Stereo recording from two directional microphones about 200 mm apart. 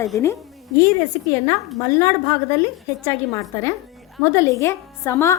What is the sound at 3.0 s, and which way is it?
A woman's voice, 15° left (ahead or behind).